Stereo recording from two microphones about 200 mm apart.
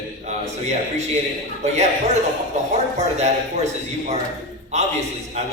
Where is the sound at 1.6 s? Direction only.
35° right (ahead or behind).